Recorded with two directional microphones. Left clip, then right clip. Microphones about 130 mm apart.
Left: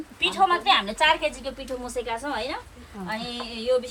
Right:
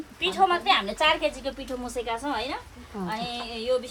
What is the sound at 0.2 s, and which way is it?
A woman's voice, 10° right (ahead or behind).